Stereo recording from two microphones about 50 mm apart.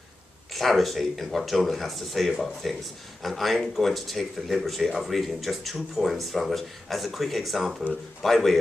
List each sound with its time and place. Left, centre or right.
0.5 s speech: centre